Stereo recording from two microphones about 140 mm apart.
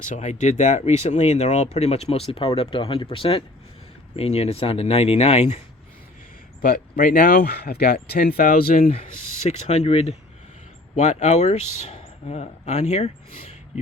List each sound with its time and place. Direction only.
0.0 s speech: 55° left (ahead or behind)
6.6 s speech: 85° left
9.0 s speech: 55° left (ahead or behind)